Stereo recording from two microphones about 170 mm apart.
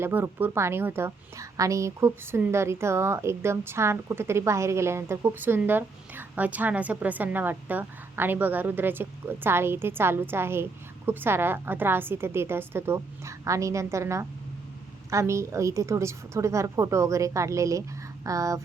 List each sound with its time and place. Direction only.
0.0 s a woman's voice: 10° right (ahead or behind)